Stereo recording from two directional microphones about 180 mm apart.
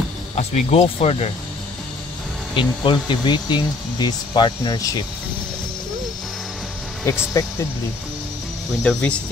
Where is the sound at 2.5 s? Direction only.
25° left (ahead or behind).